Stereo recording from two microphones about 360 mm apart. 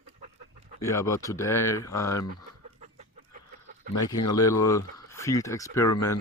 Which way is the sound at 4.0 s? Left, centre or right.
Centre.